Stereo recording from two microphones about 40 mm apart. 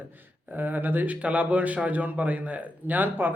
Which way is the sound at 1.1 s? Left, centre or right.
Right.